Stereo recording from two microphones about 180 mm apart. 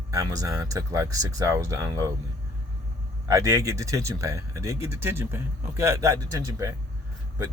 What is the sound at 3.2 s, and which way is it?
Speech, 20° right (ahead or behind).